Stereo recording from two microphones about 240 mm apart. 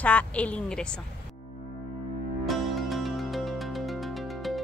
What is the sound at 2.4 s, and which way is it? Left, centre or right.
Music, centre.